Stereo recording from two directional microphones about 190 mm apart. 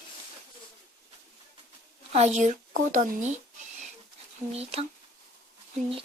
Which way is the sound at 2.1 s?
35° right (ahead or behind).